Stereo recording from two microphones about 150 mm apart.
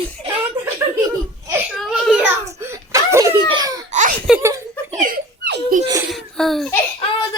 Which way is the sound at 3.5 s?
25° right (ahead or behind).